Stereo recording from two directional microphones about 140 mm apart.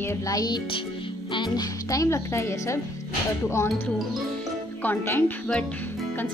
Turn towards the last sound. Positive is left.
turn(degrees=10)  # may be behind; listen again after turning